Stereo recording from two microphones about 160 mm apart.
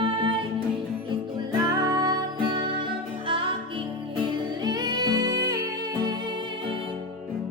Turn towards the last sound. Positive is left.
turn(degrees=-25)  # may be behind; listen again after turning